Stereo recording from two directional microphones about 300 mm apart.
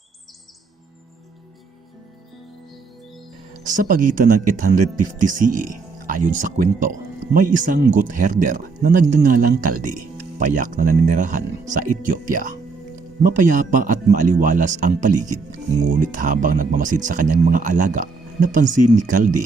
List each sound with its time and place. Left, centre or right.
3.8 s speech: right